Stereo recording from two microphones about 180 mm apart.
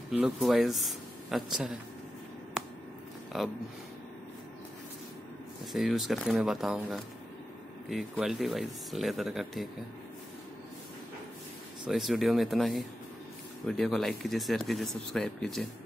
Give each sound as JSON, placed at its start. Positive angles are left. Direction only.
{"t": 0.1, "sound": "speech", "side_deg": -5}
{"t": 3.3, "sound": "speech", "side_deg": 0}
{"t": 5.7, "sound": "speech", "side_deg": 0}
{"t": 11.9, "sound": "speech", "side_deg": 0}